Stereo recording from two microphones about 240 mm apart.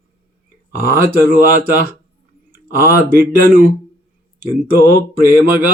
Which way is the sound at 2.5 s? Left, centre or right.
Centre.